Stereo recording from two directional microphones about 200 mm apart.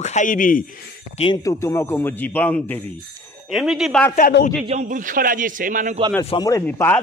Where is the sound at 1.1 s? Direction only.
25° left (ahead or behind).